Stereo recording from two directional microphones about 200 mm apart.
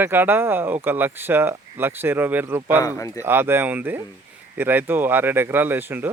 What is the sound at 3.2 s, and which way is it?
Speech, 10° right (ahead or behind).